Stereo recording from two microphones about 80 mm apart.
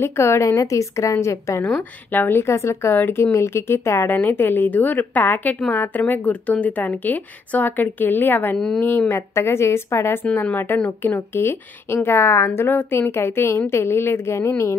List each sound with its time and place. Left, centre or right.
0.0 s a woman's voice: left
1.8 s a woman's voice: left
8.5 s a woman's voice: centre
8.8 s a woman's voice: left